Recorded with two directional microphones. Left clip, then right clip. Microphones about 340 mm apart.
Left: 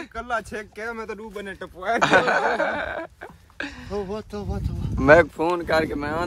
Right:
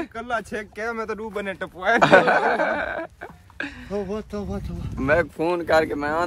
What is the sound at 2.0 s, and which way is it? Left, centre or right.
Speech, centre.